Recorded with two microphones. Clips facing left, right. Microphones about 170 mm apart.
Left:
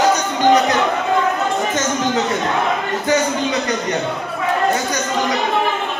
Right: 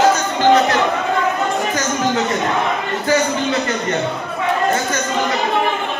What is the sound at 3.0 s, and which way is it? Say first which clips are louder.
Speech: right 1 dB; 20° left (ahead or behind).